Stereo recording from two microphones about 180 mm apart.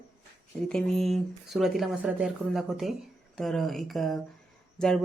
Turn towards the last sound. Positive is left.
turn(degrees=0)  # may be behind; listen again after turning